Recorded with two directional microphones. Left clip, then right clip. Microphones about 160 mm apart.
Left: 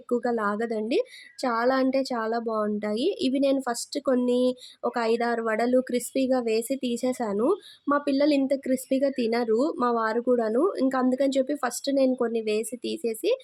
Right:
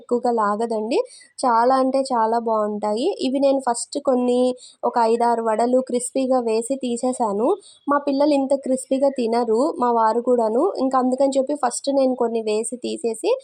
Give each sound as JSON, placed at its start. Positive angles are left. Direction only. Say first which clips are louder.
{"t": 0.2, "sound": "a woman's voice", "louder": "right 7 dB", "side_deg": -10}